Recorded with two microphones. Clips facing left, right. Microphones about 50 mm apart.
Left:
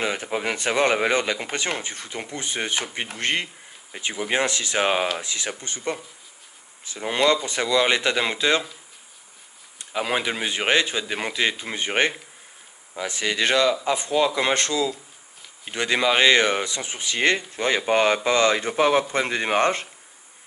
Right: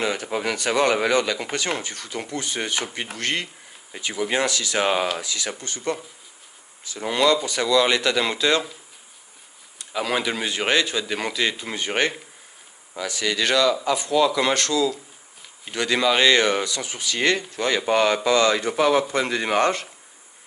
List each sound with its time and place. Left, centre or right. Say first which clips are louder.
0.0 s speech: right 1 dB; left
7.1 s speech: right 1 dB; left
9.9 s speech: even; centre